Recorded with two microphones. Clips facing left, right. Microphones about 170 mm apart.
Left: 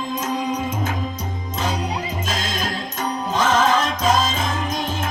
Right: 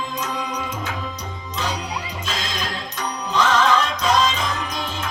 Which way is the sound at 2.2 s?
45° left (ahead or behind).